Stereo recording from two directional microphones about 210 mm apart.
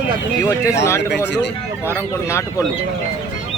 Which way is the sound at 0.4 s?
15° left (ahead or behind).